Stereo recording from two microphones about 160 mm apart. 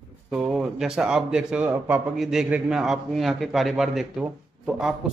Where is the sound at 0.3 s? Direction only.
5° right (ahead or behind).